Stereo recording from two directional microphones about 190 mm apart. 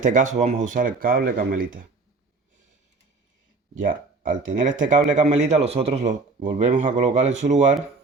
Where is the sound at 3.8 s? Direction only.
45° right (ahead or behind).